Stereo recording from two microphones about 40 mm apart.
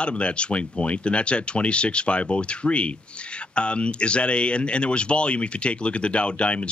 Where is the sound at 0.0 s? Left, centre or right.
Left.